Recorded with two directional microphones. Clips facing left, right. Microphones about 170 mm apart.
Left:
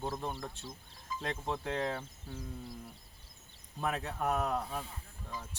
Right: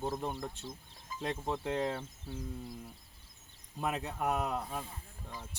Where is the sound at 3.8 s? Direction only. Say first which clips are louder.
Even; 10° right (ahead or behind).